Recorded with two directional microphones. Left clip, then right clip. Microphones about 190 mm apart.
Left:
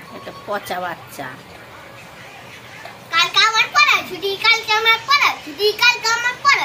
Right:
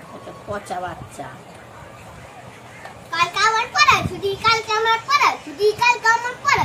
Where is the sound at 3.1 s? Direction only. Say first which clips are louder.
Left 3 dB; 15° right (ahead or behind).